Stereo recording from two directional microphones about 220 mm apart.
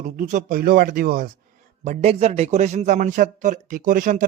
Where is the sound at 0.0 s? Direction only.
35° right (ahead or behind).